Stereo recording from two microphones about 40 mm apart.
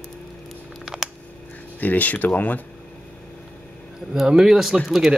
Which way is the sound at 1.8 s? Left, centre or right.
Left.